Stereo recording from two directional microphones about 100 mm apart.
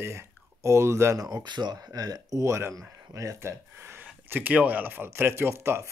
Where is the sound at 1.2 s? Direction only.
45° right (ahead or behind).